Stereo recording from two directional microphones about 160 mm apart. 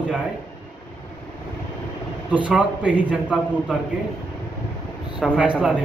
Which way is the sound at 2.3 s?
10° right (ahead or behind).